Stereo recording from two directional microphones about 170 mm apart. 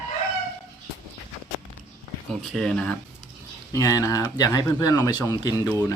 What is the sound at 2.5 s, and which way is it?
Speech, 5° left (ahead or behind).